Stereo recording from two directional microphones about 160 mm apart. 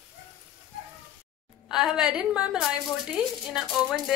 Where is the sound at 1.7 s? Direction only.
5° right (ahead or behind).